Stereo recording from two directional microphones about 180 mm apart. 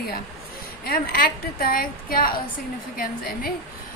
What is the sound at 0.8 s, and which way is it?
A woman's voice, 55° left (ahead or behind).